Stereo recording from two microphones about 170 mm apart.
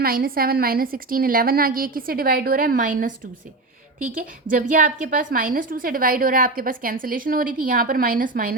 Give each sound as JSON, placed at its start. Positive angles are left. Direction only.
{"t": 0.0, "sound": "a woman's voice", "side_deg": -60}
{"t": 4.4, "sound": "a woman's voice", "side_deg": -55}